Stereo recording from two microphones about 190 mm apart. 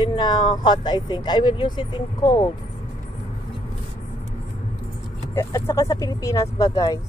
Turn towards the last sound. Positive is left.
turn(degrees=20)  # may be behind; listen again after turning